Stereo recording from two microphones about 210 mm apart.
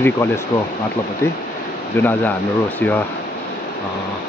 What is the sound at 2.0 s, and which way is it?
Speech, 10° left (ahead or behind).